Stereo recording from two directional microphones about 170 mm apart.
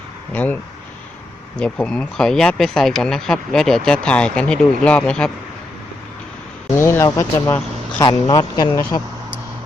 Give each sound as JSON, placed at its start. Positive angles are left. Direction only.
{"t": 1.5, "sound": "speech", "side_deg": 5}
{"t": 6.7, "sound": "speech", "side_deg": 15}